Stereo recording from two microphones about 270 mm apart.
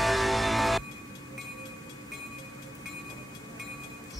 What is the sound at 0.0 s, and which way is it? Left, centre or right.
Music, centre.